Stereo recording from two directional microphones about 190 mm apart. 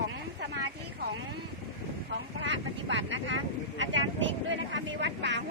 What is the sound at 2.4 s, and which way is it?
Speech, 75° right (ahead or behind).